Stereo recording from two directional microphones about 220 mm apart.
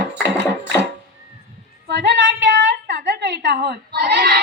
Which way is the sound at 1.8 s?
50° right (ahead or behind).